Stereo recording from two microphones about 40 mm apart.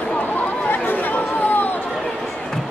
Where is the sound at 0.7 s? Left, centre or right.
Left.